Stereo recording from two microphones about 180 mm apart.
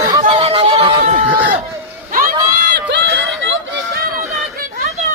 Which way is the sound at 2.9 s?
85° right.